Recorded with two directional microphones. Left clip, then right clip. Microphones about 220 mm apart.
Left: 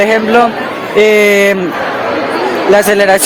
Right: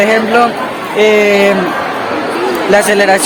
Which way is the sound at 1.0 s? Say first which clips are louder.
Left 1 dB; 55° left (ahead or behind).